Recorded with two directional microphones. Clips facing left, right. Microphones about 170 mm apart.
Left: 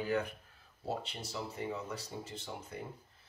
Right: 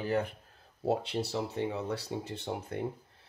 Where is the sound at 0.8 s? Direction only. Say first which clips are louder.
Right 9 dB; 70° right (ahead or behind).